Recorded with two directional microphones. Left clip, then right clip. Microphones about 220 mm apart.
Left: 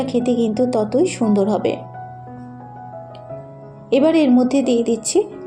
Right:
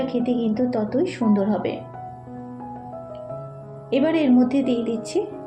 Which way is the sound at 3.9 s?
30° left (ahead or behind).